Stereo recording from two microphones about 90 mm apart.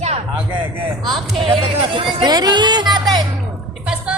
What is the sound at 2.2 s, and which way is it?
Music, 50° right (ahead or behind).